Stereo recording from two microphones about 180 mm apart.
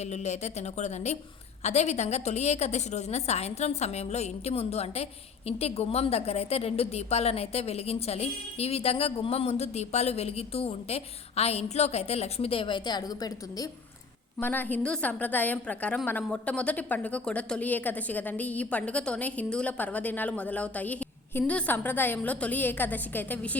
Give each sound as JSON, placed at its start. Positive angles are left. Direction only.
{"t": 0.0, "sound": "a woman's voice", "side_deg": 40}
{"t": 14.3, "sound": "a woman's voice", "side_deg": 10}